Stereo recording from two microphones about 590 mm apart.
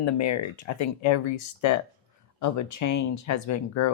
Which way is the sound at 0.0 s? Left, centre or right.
Left.